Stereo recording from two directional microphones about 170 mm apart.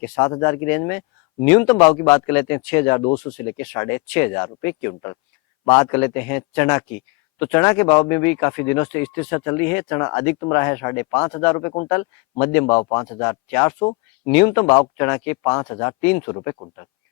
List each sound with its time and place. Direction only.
0.0 s speech: 15° left (ahead or behind)